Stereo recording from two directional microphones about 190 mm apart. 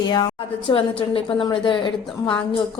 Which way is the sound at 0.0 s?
20° left (ahead or behind).